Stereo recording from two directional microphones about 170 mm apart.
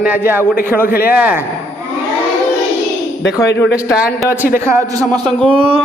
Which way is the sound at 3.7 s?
5° right (ahead or behind).